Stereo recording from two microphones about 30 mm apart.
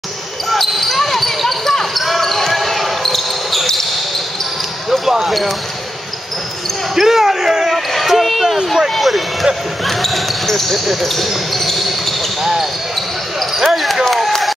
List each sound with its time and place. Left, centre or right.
0.5 s basketball bounce: centre
5.0 s basketball bounce: centre
7.0 s basketball bounce: centre
7.7 s a sound: centre
9.8 s basketball bounce: centre
11.0 s speech: centre
11.8 s basketball bounce: centre
13.6 s speech: centre
14.0 s a sound: centre